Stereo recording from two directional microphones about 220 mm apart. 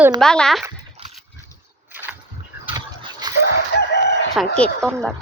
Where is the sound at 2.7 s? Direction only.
20° right (ahead or behind).